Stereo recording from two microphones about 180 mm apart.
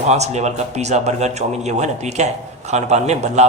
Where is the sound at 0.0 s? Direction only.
40° right (ahead or behind).